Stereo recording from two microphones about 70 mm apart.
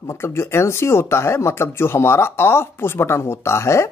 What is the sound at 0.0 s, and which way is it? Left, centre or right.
Speech, left.